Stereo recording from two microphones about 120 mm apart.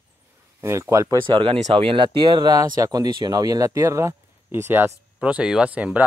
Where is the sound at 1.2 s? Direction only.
45° right (ahead or behind).